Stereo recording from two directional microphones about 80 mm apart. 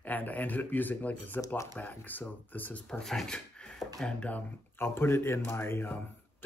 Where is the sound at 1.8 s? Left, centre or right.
Left.